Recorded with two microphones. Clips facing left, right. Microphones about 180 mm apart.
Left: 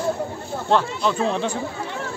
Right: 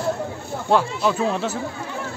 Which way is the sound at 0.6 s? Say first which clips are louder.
Right 1 dB; 10° right (ahead or behind).